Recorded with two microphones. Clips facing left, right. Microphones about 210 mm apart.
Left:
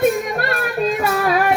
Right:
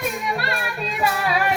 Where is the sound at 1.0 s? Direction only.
45° left (ahead or behind).